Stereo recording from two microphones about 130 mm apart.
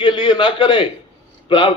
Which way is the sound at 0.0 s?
35° left (ahead or behind).